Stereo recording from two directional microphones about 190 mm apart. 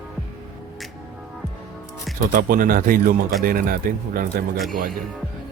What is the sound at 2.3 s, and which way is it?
Speech, 50° right (ahead or behind).